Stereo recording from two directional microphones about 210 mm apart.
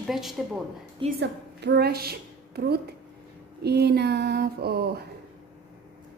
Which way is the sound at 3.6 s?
50° right (ahead or behind).